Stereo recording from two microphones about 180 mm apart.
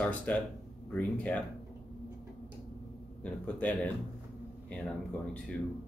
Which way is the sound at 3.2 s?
10° left (ahead or behind).